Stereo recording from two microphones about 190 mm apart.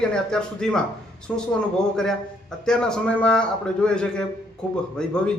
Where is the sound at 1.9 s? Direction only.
5° left (ahead or behind).